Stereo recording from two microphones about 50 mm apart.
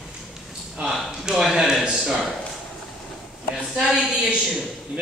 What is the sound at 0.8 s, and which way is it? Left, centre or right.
A man's voice, centre.